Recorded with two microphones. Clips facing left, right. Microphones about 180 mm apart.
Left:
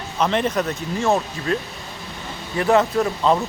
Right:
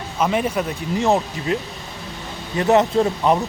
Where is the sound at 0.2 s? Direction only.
5° right (ahead or behind).